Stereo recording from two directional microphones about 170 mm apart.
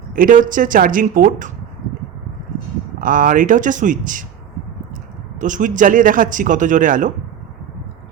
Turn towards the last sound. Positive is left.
turn(degrees=-50)  # may be behind; listen again after turning